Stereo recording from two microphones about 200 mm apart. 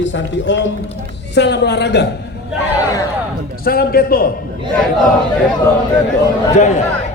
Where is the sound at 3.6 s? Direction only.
50° left (ahead or behind).